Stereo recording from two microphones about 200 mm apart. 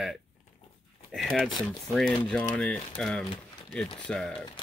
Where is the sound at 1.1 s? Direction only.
Centre (ahead or behind).